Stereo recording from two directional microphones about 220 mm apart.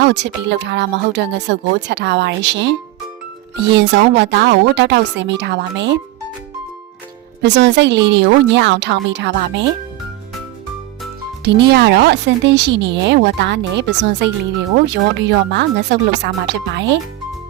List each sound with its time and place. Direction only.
0.0 s speech: 50° right (ahead or behind)
7.4 s speech: 50° right (ahead or behind)
11.4 s speech: 50° right (ahead or behind)